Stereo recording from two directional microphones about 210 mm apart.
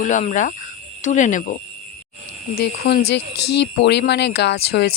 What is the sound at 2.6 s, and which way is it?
Speech, 50° left (ahead or behind).